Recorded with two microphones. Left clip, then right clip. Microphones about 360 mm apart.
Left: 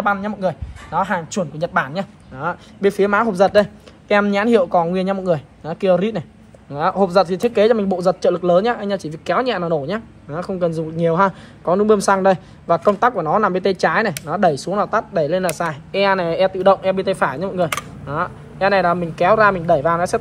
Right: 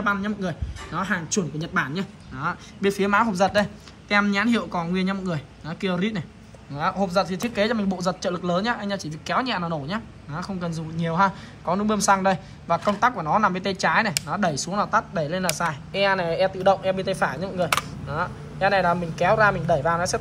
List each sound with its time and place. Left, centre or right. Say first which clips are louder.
0.0 s speech: left 6 dB; centre